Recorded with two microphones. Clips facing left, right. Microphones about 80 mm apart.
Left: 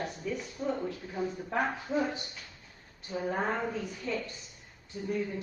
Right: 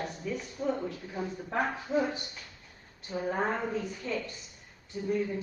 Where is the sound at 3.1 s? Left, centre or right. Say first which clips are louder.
Right 1 dB; centre.